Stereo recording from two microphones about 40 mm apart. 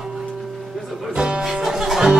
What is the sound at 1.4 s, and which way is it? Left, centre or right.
Music, centre.